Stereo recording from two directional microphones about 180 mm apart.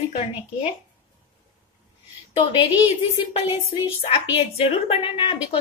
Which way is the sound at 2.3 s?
30° left (ahead or behind).